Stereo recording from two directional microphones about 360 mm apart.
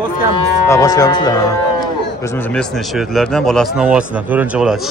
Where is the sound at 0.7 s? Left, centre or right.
Centre.